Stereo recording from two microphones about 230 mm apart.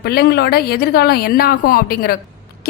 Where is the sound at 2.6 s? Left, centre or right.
Left.